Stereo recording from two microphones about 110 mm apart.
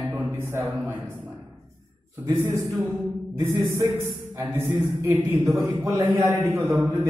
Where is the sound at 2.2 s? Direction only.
25° right (ahead or behind).